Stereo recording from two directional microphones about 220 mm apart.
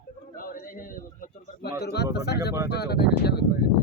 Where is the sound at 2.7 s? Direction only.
45° left (ahead or behind).